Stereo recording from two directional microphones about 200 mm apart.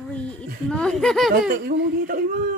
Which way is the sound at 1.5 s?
50° right (ahead or behind).